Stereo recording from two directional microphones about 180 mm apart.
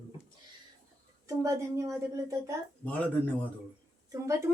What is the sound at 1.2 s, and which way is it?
Speech, 20° right (ahead or behind).